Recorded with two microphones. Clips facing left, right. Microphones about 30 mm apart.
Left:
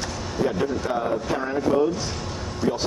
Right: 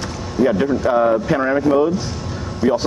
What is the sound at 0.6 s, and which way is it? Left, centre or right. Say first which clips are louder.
Speech: right 7 dB; centre.